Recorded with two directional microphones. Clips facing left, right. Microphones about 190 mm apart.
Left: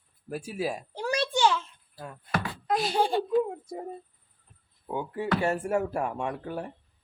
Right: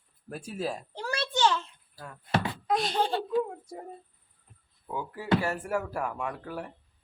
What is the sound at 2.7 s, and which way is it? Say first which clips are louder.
A woman's voice: left 2 dB; 5° left (ahead or behind).